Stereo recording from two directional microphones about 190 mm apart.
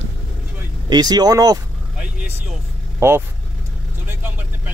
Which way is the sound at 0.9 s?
20° right (ahead or behind).